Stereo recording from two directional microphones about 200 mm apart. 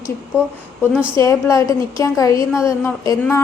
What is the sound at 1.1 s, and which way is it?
A woman's voice, 15° left (ahead or behind).